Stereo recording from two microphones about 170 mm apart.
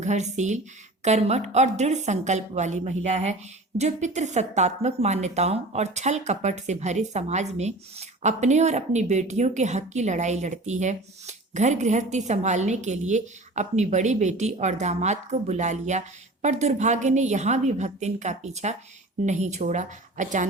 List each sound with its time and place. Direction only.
0.0 s a woman's voice: 45° right (ahead or behind)